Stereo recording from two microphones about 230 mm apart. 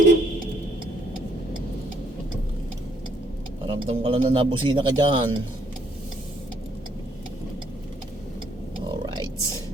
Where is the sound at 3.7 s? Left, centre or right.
Right.